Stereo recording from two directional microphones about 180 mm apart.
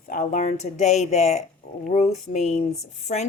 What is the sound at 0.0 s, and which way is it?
Speech, 50° left (ahead or behind).